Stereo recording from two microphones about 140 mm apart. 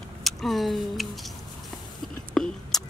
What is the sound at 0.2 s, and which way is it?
Speech, centre (ahead or behind).